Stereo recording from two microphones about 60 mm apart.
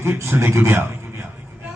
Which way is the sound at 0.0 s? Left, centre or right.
Right.